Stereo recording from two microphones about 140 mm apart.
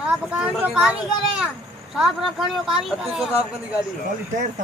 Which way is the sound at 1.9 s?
Centre (ahead or behind).